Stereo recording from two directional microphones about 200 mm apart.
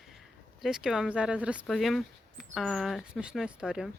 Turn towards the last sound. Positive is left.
turn(degrees=-5)  # may be behind; listen again after turning